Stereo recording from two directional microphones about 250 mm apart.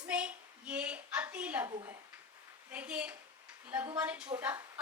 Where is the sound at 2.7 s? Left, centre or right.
Centre.